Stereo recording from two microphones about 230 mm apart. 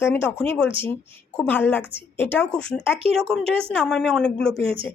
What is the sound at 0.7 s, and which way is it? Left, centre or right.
Speech, right.